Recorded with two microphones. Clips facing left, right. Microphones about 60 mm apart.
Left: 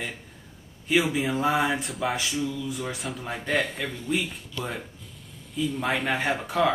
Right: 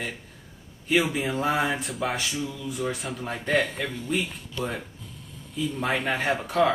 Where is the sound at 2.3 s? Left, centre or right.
Centre.